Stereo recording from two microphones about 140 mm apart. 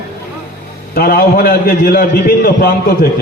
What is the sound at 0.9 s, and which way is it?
A man's voice, 90° left.